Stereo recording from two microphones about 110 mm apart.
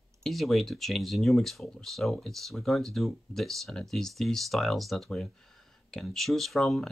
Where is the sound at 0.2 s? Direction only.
Centre (ahead or behind).